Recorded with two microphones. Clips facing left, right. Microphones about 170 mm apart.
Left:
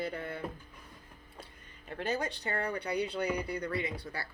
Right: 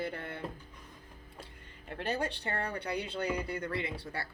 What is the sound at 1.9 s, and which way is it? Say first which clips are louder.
Speech: even; 25° right (ahead or behind).